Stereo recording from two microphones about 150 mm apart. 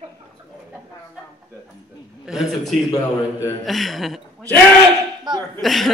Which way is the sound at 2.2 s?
5° right (ahead or behind).